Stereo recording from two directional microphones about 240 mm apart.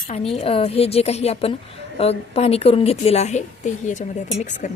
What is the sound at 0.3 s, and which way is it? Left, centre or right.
A woman's voice, left.